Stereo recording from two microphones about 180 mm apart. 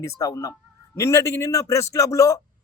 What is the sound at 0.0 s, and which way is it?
A man's voice, 20° left (ahead or behind).